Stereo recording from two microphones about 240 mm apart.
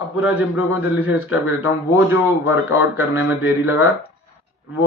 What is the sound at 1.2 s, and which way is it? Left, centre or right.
Speech, left.